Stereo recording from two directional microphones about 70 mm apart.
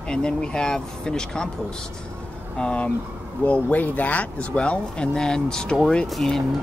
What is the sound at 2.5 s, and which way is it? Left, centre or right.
Speech, centre.